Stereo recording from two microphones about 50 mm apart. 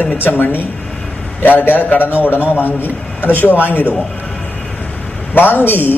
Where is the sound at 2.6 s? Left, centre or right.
Left.